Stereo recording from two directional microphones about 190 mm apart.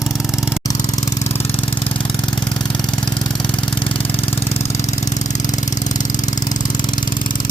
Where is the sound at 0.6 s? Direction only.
20° left (ahead or behind).